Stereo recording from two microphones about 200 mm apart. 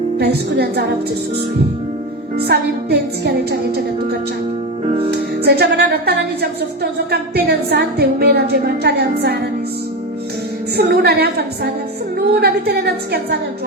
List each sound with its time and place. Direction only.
0.2 s a woman's voice: 55° right (ahead or behind)
2.5 s a woman's voice: 55° right (ahead or behind)
4.9 s music: 30° right (ahead or behind)
5.1 s a woman's voice: 55° right (ahead or behind)
10.8 s a woman's voice: 55° right (ahead or behind)